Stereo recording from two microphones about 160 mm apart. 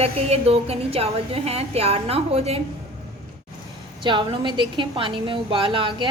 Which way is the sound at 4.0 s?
30° right (ahead or behind).